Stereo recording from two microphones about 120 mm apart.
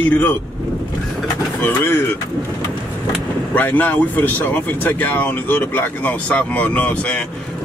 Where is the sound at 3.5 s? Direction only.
15° left (ahead or behind).